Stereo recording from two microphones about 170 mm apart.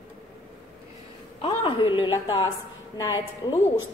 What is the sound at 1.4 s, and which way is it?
Speech, 30° left (ahead or behind).